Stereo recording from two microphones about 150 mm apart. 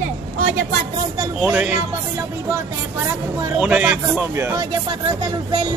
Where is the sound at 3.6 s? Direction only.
10° right (ahead or behind).